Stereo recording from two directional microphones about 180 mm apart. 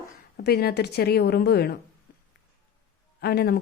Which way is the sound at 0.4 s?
60° left (ahead or behind).